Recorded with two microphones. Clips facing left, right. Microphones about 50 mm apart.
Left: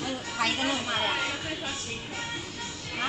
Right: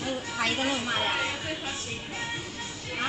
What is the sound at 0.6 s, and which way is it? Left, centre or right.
Speech, centre.